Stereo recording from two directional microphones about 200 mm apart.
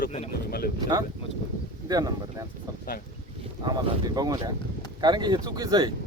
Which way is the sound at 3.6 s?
20° right (ahead or behind).